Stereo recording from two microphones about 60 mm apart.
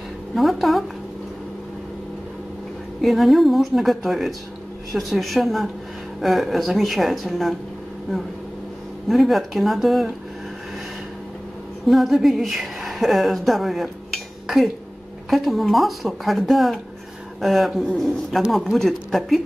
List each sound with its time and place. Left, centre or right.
0.3 s speech: centre
3.0 s speech: centre
9.1 s speech: centre
11.9 s speech: centre